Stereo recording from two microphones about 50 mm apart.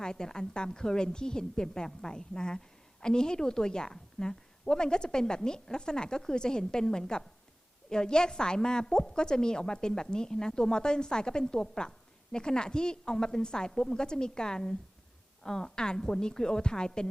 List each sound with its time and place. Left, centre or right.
0.0 s a woman's voice: centre